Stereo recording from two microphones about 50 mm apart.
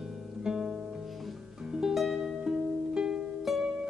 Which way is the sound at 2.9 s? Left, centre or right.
Centre.